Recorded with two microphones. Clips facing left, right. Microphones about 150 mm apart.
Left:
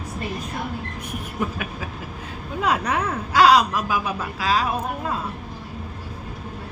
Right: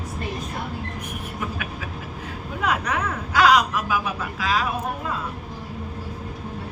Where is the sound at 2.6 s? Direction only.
30° left (ahead or behind).